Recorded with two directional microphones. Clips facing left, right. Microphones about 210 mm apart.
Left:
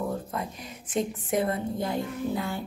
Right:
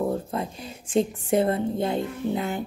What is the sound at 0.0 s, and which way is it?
A woman's voice, 30° right (ahead or behind).